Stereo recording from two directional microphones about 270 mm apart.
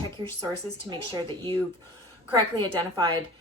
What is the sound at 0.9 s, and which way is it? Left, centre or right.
Speech, centre.